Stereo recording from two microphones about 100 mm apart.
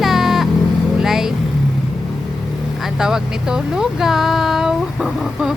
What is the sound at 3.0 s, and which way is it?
Speech, 5° right (ahead or behind).